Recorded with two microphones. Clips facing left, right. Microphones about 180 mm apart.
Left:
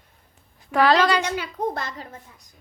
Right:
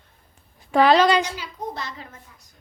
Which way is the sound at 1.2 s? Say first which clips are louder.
Left 5 dB; 55° left (ahead or behind).